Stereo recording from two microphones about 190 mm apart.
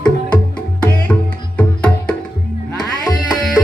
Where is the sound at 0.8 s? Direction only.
10° left (ahead or behind).